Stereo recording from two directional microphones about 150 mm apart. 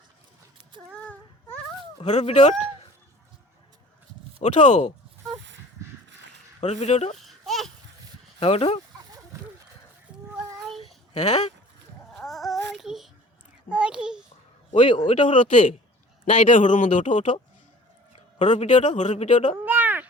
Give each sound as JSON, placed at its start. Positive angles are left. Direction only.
{"t": 0.9, "sound": "child singing", "side_deg": 10}
{"t": 2.0, "sound": "speech", "side_deg": 45}
{"t": 4.4, "sound": "speech", "side_deg": 50}
{"t": 6.6, "sound": "speech", "side_deg": 50}
{"t": 7.3, "sound": "a sound", "side_deg": 0}
{"t": 8.4, "sound": "a man's voice", "side_deg": 40}
{"t": 10.8, "sound": "a sound", "side_deg": 45}
{"t": 12.1, "sound": "child singing", "side_deg": 0}
{"t": 13.7, "sound": "a sound", "side_deg": -5}
{"t": 14.7, "sound": "a man's voice", "side_deg": 35}
{"t": 16.3, "sound": "speech", "side_deg": 60}
{"t": 19.6, "sound": "a sound", "side_deg": -10}